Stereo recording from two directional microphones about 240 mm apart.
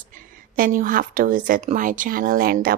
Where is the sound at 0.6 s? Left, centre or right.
Right.